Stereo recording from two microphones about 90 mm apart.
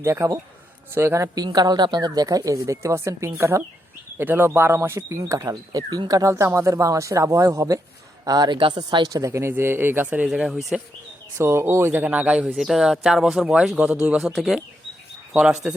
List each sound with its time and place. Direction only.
0.0 s speech: 35° right (ahead or behind)
1.5 s speech: 50° right (ahead or behind)
8.5 s speech: 65° right (ahead or behind)
9.2 s speech: 35° right (ahead or behind)
10.2 s speech: 5° right (ahead or behind)
11.3 s speech: 30° right (ahead or behind)
12.5 s speech: 5° right (ahead or behind)
14.2 s speech: centre (ahead or behind)